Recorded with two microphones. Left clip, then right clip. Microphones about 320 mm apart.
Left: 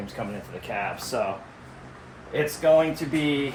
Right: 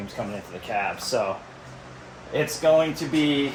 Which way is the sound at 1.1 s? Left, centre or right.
Centre.